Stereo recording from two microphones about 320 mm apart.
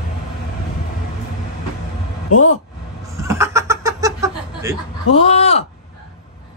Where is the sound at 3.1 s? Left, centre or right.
Centre.